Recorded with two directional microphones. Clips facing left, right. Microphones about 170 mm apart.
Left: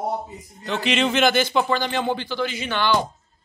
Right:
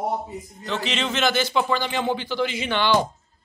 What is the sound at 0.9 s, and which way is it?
Speech, 10° left (ahead or behind).